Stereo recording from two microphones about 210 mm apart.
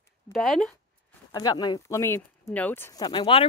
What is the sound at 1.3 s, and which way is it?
Speech, 20° left (ahead or behind).